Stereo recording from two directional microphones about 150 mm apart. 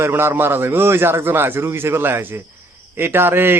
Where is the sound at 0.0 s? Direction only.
15° right (ahead or behind).